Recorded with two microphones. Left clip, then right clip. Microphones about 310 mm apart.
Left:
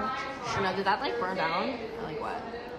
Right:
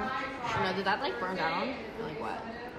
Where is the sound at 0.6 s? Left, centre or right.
Centre.